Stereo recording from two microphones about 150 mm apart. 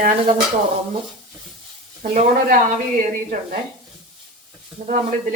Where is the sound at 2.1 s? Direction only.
50° right (ahead or behind).